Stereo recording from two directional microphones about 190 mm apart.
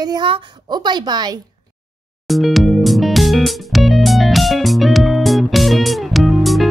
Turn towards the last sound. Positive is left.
turn(degrees=0)  # may be behind; listen again after turning